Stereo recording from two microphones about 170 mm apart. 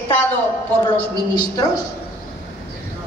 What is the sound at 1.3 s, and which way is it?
Speech, 25° left (ahead or behind).